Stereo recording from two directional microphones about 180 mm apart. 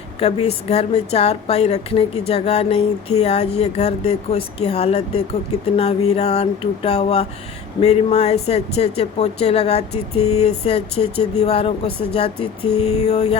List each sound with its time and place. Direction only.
0.2 s speech: 35° left (ahead or behind)